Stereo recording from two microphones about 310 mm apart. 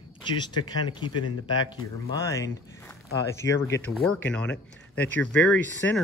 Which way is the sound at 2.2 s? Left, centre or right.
Centre.